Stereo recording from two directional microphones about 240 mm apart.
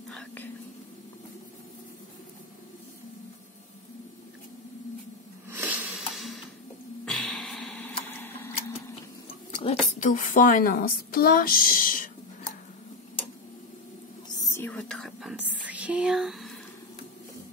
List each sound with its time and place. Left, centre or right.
0.1 s whispering: centre
5.5 s a sound: centre
9.6 s a woman's voice: left
14.5 s whispering: centre